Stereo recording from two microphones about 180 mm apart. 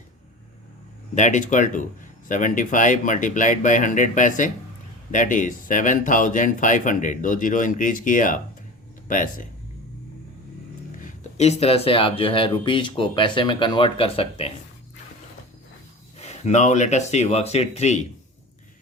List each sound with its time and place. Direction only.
1.1 s speech: 45° left (ahead or behind)
11.0 s speech: 40° left (ahead or behind)
16.1 s speech: 40° left (ahead or behind)